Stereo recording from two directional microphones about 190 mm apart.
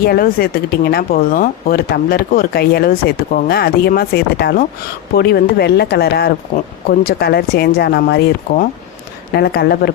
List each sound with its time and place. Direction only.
0.0 s speech: 55° left (ahead or behind)
6.5 s speech: 40° left (ahead or behind)
7.0 s speech: 55° left (ahead or behind)